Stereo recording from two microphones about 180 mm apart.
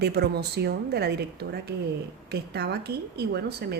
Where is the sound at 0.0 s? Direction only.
65° right (ahead or behind).